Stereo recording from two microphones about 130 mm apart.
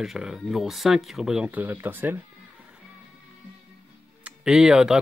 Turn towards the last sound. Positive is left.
turn(degrees=-5)  # may be behind; listen again after turning